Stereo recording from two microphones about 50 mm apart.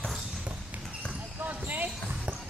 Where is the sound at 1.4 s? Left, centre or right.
Right.